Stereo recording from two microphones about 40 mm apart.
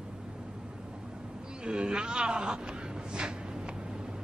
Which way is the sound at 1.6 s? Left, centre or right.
Right.